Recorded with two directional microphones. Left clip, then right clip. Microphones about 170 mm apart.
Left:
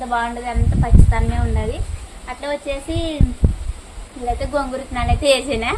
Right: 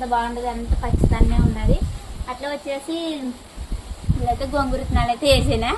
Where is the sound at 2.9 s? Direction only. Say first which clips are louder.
Left 2 dB; 35° left (ahead or behind).